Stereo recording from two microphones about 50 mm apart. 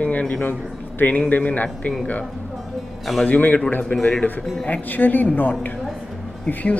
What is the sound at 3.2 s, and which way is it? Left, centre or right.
Speech, left.